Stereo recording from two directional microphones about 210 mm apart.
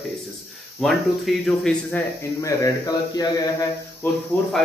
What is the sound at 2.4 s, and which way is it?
Speech, 15° left (ahead or behind).